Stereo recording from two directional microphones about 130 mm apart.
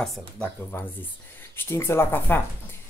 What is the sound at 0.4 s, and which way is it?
Speech, 15° left (ahead or behind).